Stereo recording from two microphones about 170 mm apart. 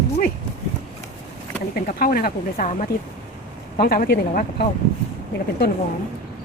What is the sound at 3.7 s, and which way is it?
Speech, 60° left (ahead or behind).